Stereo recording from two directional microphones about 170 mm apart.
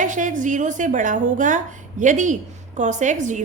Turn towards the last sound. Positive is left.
turn(degrees=-45)  # may be behind; listen again after turning